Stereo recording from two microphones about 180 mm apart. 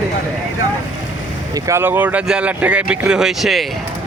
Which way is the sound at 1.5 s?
15° right (ahead or behind).